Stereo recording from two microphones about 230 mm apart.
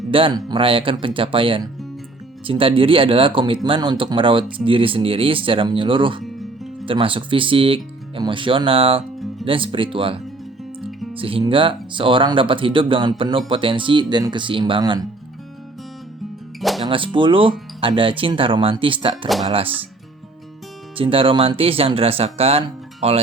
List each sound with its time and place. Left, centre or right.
0.1 s speech: right
16.6 s music: centre
16.8 s speech: right
20.9 s speech: right